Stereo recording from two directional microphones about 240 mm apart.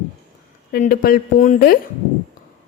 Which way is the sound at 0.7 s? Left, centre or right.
Left.